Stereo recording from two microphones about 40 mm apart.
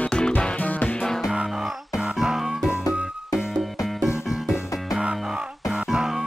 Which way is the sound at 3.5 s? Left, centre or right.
Centre.